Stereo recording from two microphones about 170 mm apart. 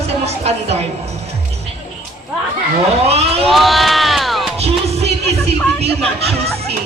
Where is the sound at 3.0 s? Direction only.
35° right (ahead or behind).